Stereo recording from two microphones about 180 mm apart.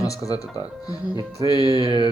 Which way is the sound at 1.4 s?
25° right (ahead or behind).